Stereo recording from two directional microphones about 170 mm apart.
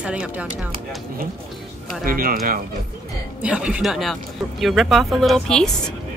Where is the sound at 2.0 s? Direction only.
55° right (ahead or behind).